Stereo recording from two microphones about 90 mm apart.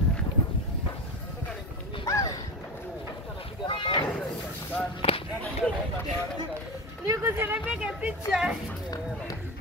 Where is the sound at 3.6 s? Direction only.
65° left (ahead or behind).